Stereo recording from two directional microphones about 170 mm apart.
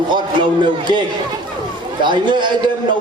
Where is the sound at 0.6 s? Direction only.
25° right (ahead or behind).